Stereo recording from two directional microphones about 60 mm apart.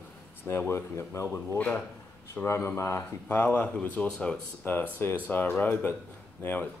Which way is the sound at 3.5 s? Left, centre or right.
Left.